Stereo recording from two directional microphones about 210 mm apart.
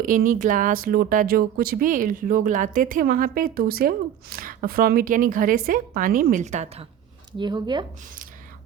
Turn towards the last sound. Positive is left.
turn(degrees=-20)  # may be behind; listen again after turning